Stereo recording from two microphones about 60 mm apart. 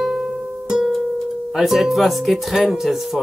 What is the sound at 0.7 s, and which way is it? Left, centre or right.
Music, centre.